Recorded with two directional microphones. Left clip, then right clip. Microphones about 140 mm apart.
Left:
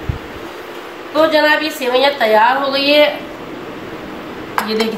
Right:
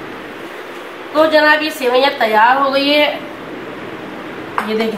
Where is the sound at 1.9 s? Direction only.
20° right (ahead or behind).